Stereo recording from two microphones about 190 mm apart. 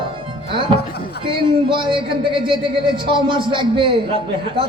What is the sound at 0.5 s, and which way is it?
A man's voice, 25° right (ahead or behind).